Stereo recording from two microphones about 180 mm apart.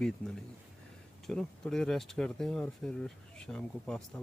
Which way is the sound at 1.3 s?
5° left (ahead or behind).